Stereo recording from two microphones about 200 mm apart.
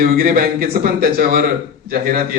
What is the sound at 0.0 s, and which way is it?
Speech, 45° right (ahead or behind).